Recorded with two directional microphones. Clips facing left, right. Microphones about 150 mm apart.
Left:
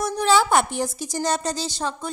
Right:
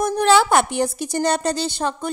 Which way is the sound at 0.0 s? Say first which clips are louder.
Right 4 dB; 65° right (ahead or behind).